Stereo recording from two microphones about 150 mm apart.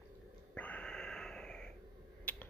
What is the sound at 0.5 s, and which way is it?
Snort, 10° left (ahead or behind).